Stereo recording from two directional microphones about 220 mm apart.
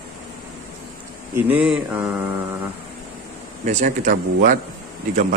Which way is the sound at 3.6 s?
35° right (ahead or behind).